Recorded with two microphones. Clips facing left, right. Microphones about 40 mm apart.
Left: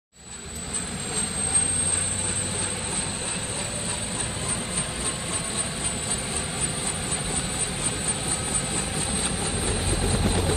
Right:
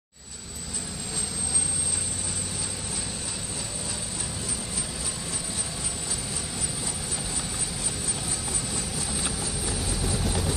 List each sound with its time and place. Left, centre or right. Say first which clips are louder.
9.1 s vehicle: left 3 dB; left